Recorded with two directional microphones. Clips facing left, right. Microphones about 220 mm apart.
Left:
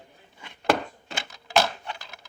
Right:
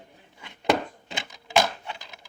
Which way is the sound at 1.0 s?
20° right (ahead or behind).